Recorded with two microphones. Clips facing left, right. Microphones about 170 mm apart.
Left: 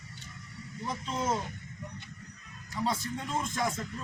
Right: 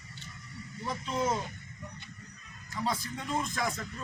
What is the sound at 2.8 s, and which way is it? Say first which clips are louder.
Speech: left 1 dB; centre (ahead or behind).